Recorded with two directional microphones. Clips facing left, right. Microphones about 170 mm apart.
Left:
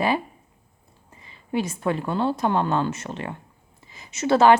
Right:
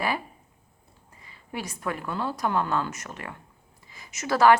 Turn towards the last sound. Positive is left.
turn(degrees=25)  # may be behind; listen again after turning